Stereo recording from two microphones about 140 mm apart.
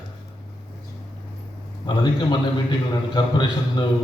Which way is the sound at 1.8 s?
30° left (ahead or behind).